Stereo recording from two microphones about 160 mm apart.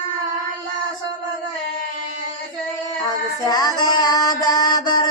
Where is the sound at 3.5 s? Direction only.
25° left (ahead or behind).